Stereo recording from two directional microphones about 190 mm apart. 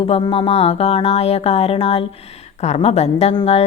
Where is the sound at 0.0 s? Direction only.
30° left (ahead or behind).